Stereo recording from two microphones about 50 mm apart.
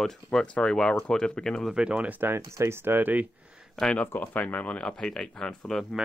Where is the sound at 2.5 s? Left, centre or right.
Right.